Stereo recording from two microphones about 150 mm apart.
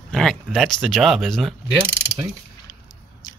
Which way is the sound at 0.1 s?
5° left (ahead or behind).